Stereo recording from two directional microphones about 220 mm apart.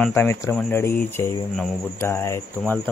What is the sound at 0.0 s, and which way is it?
Speech, 10° left (ahead or behind).